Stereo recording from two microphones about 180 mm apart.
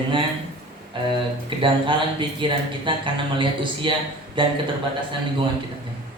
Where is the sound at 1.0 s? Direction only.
25° right (ahead or behind).